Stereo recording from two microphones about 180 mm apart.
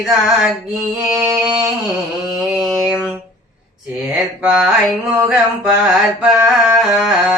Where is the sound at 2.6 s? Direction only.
Centre (ahead or behind).